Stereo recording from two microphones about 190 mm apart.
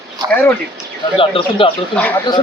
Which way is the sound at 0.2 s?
20° right (ahead or behind).